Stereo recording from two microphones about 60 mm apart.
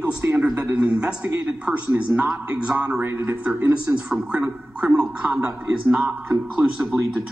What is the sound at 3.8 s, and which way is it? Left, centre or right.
Speech, centre.